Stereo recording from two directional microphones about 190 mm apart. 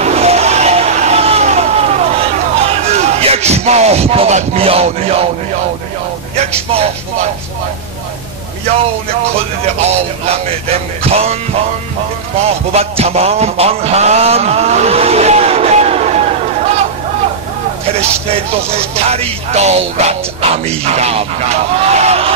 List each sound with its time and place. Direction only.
0.0 s vehicle: 35° right (ahead or behind)
6.3 s a man's voice: 35° right (ahead or behind)
9.8 s speech: 35° right (ahead or behind)
12.4 s speech: 35° right (ahead or behind)
18.3 s speech: 30° right (ahead or behind)